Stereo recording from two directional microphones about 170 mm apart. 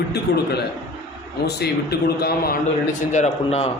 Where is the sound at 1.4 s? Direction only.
70° left (ahead or behind).